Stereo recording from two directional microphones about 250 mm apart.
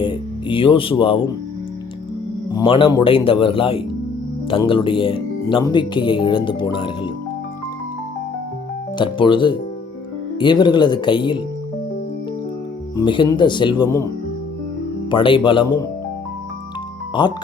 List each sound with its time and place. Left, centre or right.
0.0 s music: centre
2.5 s speech: centre
9.0 s speech: centre
13.0 s speech: centre
15.1 s speech: centre
17.2 s speech: centre